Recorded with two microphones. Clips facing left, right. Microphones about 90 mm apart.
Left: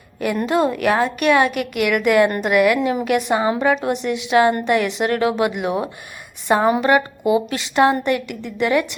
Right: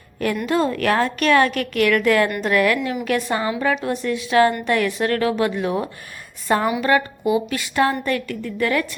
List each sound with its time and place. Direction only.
0.4 s a woman's voice: 20° left (ahead or behind)